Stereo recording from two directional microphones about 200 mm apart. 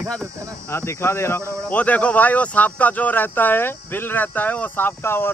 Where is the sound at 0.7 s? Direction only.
15° left (ahead or behind).